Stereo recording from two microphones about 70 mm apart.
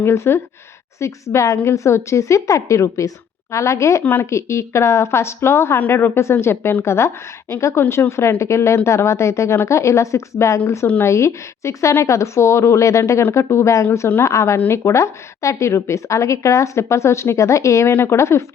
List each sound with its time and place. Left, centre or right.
0.0 s a woman's voice: left
4.0 s speech: left
4.3 s a woman's voice: left